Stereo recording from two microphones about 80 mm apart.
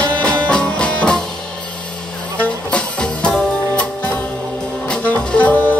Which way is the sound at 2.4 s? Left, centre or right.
Centre.